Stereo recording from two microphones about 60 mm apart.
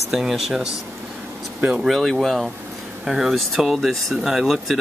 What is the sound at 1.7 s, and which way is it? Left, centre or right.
Speech, centre.